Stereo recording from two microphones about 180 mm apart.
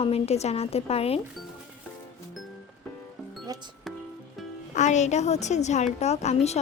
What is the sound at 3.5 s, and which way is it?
Music, 20° right (ahead or behind).